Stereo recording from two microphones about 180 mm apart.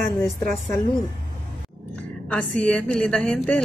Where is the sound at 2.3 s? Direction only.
5° left (ahead or behind).